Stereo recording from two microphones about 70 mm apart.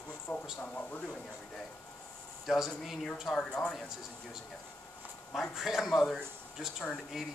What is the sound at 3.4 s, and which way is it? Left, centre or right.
Speech, centre.